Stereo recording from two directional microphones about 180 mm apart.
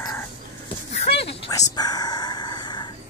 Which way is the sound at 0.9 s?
35° left (ahead or behind).